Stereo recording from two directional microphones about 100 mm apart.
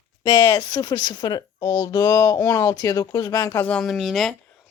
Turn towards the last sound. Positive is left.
turn(degrees=0)  # may be behind; listen again after turning